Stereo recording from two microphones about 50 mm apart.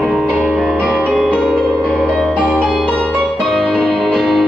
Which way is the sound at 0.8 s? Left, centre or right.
Centre.